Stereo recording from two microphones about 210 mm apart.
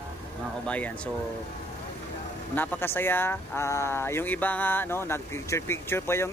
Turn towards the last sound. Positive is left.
turn(degrees=10)  # may be behind; listen again after turning